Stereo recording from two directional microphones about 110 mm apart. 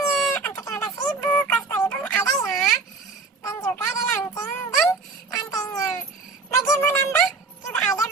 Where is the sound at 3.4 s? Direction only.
25° left (ahead or behind).